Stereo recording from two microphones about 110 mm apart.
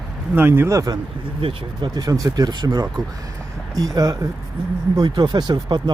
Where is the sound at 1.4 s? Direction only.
40° right (ahead or behind).